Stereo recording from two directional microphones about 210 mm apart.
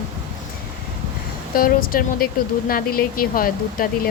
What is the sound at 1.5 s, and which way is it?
Speech, 45° left (ahead or behind).